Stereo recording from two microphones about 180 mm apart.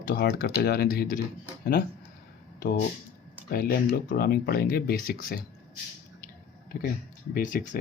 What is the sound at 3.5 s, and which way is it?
Speech, 55° left (ahead or behind).